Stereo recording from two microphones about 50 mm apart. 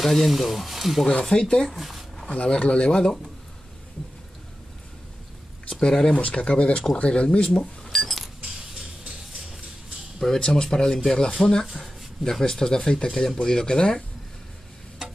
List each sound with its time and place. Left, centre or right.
0.0 s speech: centre
1.0 s speech: centre
1.8 s a sound: centre
2.3 s speech: left
5.7 s speech: centre
5.9 s speech: centre
6.2 s speech: left
7.4 s speech: centre
10.2 s speech: centre